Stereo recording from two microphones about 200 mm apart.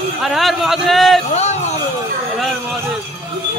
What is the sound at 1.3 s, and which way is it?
Speech, 35° left (ahead or behind).